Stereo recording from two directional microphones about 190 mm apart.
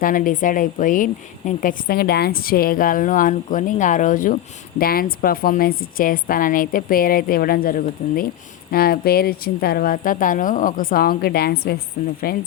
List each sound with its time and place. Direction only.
0.0 s a woman's voice: 45° left (ahead or behind)